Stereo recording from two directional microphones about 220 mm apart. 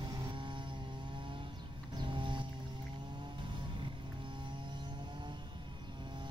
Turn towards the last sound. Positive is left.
turn(degrees=-20)  # may be behind; listen again after turning